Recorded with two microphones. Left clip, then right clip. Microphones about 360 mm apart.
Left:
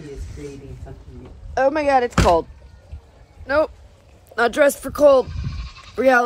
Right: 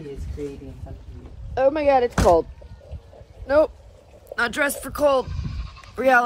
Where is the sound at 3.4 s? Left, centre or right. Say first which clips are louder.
Right 1 dB; left.